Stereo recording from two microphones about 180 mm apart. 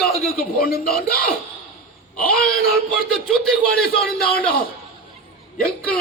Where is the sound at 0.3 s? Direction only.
55° left (ahead or behind).